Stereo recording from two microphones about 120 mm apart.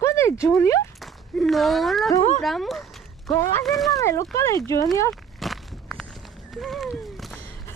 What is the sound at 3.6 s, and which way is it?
Speech, centre (ahead or behind).